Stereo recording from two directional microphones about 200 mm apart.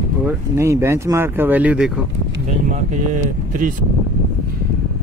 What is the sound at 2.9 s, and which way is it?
Speech, 40° right (ahead or behind).